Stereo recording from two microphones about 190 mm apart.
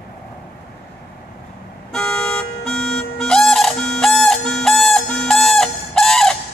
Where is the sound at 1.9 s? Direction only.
5° left (ahead or behind).